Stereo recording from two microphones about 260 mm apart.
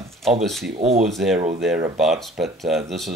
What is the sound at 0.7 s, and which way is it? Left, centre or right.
Speech, right.